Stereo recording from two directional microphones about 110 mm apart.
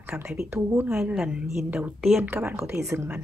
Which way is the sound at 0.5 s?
20° right (ahead or behind).